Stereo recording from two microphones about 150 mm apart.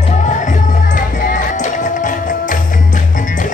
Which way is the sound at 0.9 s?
65° left (ahead or behind).